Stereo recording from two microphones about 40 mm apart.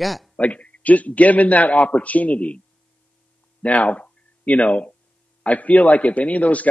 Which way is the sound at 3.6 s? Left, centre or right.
Left.